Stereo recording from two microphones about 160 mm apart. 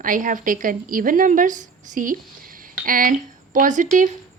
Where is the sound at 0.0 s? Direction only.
55° right (ahead or behind).